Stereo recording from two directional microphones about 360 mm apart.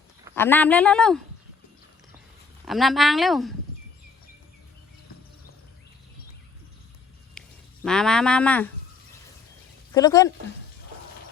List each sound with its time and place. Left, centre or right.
0.3 s speech: centre
2.6 s speech: centre
7.4 s a sound: centre
7.9 s speech: centre
9.9 s speech: centre